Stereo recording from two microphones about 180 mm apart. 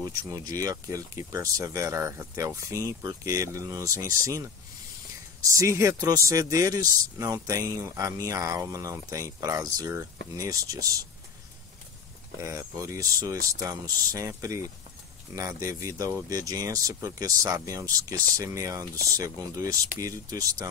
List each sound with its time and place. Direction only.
0.3 s speech: 20° right (ahead or behind)
12.4 s speech: 15° right (ahead or behind)